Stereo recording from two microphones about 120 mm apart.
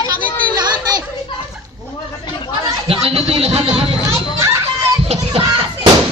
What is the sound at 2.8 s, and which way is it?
Speech, 55° right (ahead or behind).